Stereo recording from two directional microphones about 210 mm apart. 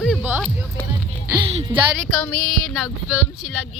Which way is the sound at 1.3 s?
15° right (ahead or behind).